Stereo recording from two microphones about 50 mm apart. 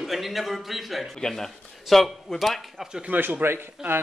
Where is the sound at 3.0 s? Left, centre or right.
Right.